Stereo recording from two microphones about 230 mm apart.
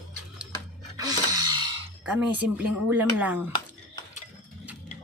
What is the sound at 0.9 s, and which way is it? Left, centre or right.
Music, centre.